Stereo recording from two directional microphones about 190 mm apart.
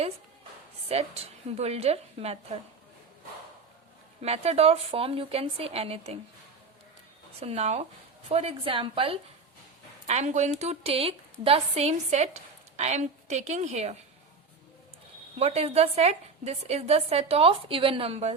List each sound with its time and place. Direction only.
0.9 s a woman's voice: 35° right (ahead or behind)
4.2 s a woman's voice: 35° right (ahead or behind)
7.3 s a woman's voice: 35° right (ahead or behind)
15.4 s a woman's voice: 35° right (ahead or behind)